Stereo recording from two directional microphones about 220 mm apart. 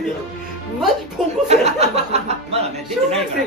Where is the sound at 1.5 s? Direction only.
30° right (ahead or behind).